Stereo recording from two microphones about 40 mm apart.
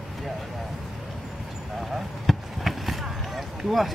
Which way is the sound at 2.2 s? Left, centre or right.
Centre.